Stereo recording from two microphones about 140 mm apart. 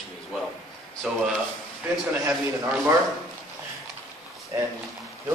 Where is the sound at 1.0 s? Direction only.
5° right (ahead or behind).